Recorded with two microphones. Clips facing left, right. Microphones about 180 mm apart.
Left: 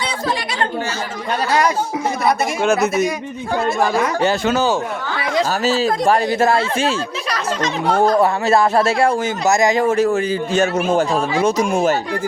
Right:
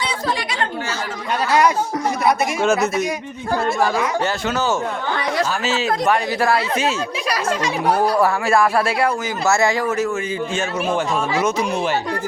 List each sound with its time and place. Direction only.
2.6 s speech: centre (ahead or behind)
4.5 s speech: 15° left (ahead or behind)
5.5 s a man's voice: 35° left (ahead or behind)
6.4 s speech: 25° left (ahead or behind)
7.3 s speech: 10° right (ahead or behind)
8.2 s a man's voice: 25° left (ahead or behind)
11.6 s speech: 45° left (ahead or behind)